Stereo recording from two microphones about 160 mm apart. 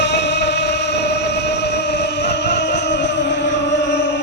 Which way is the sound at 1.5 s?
90° left.